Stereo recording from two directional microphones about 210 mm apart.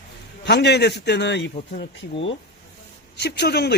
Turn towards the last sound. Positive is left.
turn(degrees=50)  # may be behind; listen again after turning